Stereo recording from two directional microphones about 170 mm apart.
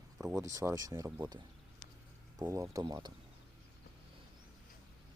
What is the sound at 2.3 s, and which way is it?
Speech, 20° right (ahead or behind).